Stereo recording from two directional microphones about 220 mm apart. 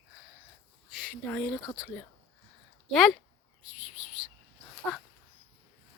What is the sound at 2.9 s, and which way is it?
Speech, centre (ahead or behind).